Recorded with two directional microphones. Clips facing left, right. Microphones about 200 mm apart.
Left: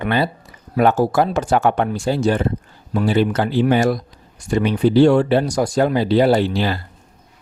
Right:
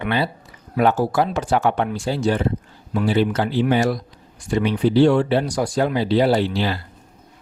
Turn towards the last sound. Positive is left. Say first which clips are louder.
# left 2 dB
turn(degrees=45)  # may be behind; listen again after turning